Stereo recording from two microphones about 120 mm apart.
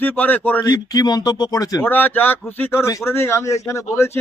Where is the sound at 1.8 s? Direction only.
15° left (ahead or behind).